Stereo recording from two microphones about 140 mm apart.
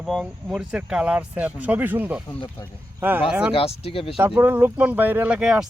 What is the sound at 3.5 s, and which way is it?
Speech, 45° left (ahead or behind).